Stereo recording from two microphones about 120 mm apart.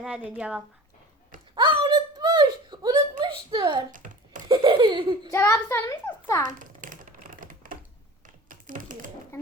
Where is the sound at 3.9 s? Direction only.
90° right.